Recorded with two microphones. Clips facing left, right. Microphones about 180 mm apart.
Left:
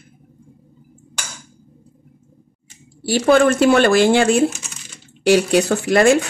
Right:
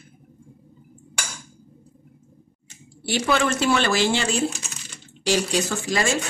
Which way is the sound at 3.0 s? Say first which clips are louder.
Left 9 dB; 45° left (ahead or behind).